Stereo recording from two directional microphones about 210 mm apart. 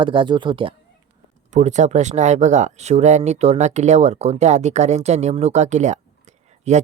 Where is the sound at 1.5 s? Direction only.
35° right (ahead or behind).